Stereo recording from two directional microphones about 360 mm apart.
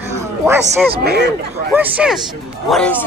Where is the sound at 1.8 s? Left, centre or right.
Centre.